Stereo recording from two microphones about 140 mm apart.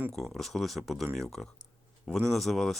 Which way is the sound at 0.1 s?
5° left (ahead or behind).